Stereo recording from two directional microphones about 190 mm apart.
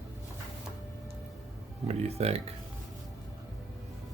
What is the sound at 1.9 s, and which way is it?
Speech, 35° right (ahead or behind).